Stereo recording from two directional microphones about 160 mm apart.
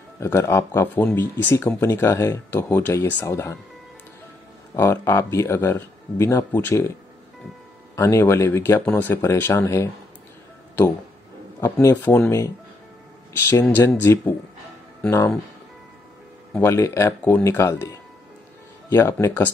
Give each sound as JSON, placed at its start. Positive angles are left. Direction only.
{"t": 0.2, "sound": "speech", "side_deg": 15}
{"t": 4.7, "sound": "speech", "side_deg": 15}
{"t": 7.9, "sound": "speech", "side_deg": 15}
{"t": 11.6, "sound": "speech", "side_deg": 15}
{"t": 16.5, "sound": "speech", "side_deg": 15}